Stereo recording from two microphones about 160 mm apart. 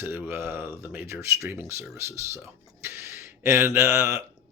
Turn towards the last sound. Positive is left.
turn(degrees=-15)  # may be behind; listen again after turning